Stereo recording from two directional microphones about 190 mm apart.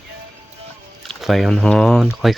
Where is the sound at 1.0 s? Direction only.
Centre (ahead or behind).